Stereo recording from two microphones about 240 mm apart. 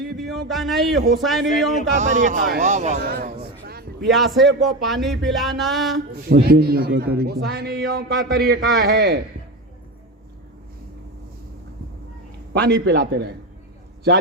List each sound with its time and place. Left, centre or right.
0.2 s music: centre
2.0 s a man's voice: right
4.0 s music: centre
6.4 s a man's voice: right
12.5 s a man's voice: right